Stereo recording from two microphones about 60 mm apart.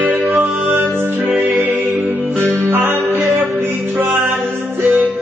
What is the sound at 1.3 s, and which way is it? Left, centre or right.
Music, right.